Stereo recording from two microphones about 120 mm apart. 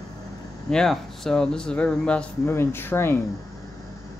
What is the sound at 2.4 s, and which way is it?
Speech, 20° left (ahead or behind).